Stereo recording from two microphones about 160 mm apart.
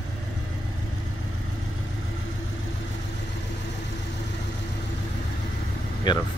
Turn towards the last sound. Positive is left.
turn(degrees=30)  # may be behind; listen again after turning